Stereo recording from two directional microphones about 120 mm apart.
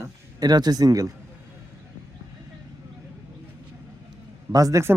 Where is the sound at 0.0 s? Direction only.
35° right (ahead or behind).